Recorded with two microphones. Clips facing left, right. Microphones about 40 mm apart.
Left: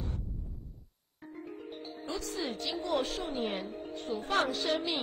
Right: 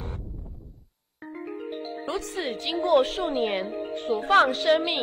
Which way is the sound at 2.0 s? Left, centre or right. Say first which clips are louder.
Right 5 dB; right.